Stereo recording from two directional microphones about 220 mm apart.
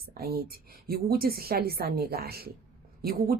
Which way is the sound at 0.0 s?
45° right (ahead or behind).